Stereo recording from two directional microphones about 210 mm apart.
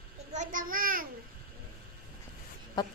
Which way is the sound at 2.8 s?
20° left (ahead or behind).